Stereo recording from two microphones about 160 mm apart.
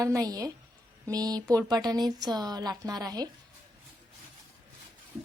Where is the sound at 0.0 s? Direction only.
20° right (ahead or behind).